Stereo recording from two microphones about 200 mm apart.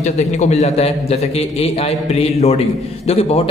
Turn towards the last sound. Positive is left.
turn(degrees=30)  # may be behind; listen again after turning